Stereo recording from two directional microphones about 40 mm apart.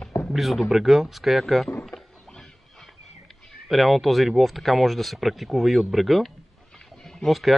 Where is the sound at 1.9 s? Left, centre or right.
Centre.